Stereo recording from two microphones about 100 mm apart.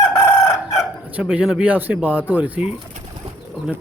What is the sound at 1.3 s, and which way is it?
Speech, 10° right (ahead or behind).